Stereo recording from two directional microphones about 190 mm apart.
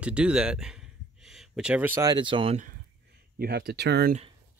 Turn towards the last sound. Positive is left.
turn(degrees=-60)  # may be behind; listen again after turning